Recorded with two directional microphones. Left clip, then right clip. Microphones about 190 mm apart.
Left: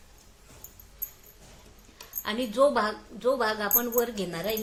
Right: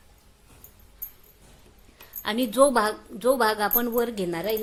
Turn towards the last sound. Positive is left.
turn(degrees=-40)  # may be behind; listen again after turning